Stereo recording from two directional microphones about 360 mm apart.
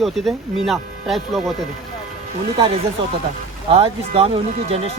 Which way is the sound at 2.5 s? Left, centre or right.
Centre.